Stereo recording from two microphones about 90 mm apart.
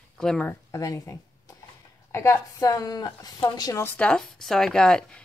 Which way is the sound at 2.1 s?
30° left (ahead or behind).